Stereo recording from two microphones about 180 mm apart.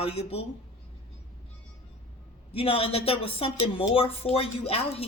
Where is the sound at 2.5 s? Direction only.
30° left (ahead or behind).